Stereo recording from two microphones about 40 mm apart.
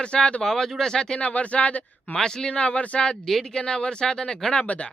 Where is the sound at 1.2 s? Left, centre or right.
Left.